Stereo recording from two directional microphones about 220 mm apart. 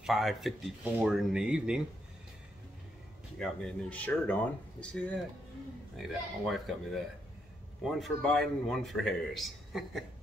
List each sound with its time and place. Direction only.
0.0 s a man's voice: centre (ahead or behind)
3.3 s a man's voice: 5° left (ahead or behind)